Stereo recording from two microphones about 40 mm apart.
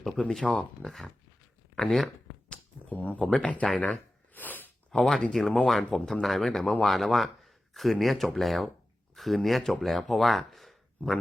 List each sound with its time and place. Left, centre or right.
0.4 s speech: centre
2.9 s speech: left
3.3 s speech: left
4.4 s a sound: left
4.9 s speech: centre